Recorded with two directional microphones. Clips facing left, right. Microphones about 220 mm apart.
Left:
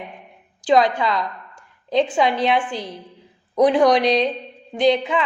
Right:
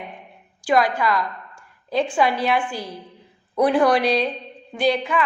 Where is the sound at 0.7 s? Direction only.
20° left (ahead or behind).